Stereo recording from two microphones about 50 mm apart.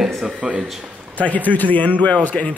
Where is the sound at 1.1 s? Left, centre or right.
Left.